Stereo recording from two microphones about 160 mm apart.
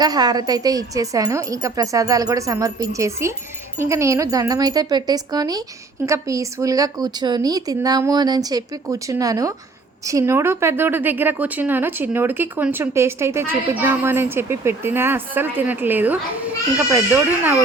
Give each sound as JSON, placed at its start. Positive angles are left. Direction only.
{"t": 0.0, "sound": "a woman's voice", "side_deg": -25}